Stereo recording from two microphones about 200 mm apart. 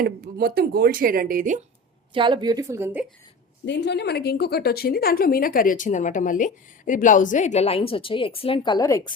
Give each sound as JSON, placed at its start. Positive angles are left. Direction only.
{"t": 0.0, "sound": "speech", "side_deg": -50}
{"t": 2.1, "sound": "a woman's voice", "side_deg": -25}
{"t": 3.7, "sound": "a woman's voice", "side_deg": 60}